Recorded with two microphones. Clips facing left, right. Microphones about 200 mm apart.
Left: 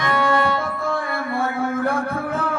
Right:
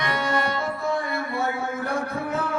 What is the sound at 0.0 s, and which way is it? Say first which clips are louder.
Music: left 6 dB; 55° left (ahead or behind).